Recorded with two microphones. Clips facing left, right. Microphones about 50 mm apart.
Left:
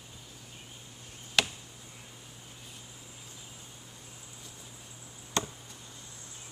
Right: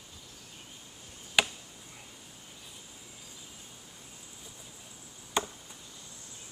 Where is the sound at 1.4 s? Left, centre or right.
Centre.